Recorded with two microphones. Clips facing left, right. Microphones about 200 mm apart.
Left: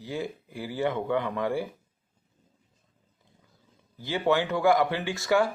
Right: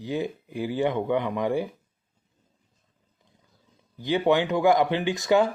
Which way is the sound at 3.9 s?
15° right (ahead or behind).